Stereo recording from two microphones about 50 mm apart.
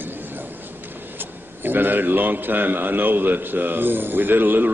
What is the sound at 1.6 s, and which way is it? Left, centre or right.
A man's voice, right.